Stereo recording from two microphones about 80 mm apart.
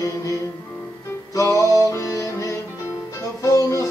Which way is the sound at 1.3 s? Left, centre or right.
Left.